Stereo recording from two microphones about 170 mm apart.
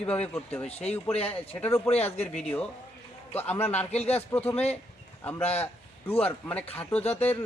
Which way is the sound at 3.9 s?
40° left (ahead or behind).